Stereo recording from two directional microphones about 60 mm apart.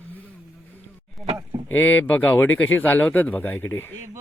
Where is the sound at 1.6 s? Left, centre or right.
Left.